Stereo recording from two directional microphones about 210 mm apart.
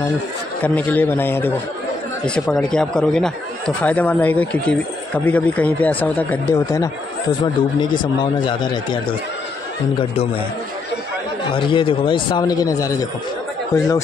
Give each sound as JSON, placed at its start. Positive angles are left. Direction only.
{"t": 0.7, "sound": "speech", "side_deg": 10}
{"t": 8.2, "sound": "a man's voice", "side_deg": 20}
{"t": 11.5, "sound": "a man's voice", "side_deg": 25}